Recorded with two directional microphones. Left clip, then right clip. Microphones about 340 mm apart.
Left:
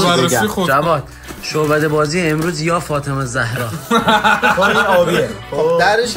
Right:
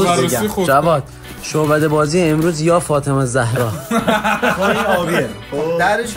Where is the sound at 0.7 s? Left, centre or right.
Centre.